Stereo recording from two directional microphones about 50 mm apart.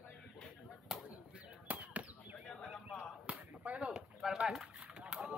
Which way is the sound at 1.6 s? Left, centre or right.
Right.